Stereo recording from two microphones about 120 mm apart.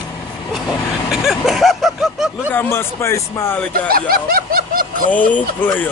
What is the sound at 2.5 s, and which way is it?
Speech, 15° left (ahead or behind).